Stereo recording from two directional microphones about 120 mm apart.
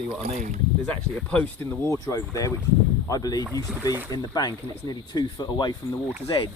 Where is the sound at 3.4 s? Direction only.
25° right (ahead or behind).